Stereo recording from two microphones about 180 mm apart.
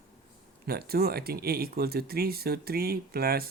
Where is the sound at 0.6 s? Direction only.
60° right (ahead or behind).